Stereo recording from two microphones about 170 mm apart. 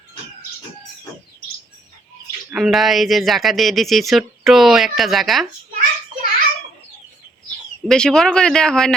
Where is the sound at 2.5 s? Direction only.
Centre (ahead or behind).